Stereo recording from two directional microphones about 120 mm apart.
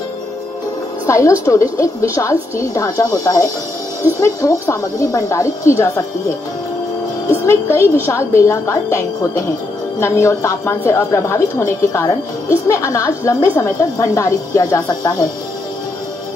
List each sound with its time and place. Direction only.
1.0 s a woman's voice: 25° left (ahead or behind)
7.4 s a woman's voice: 20° left (ahead or behind)